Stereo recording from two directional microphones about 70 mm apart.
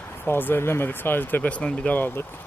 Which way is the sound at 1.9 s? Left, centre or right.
Left.